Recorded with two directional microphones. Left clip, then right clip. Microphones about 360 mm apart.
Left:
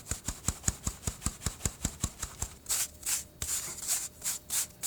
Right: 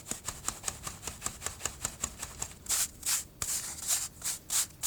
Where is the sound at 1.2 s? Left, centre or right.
Centre.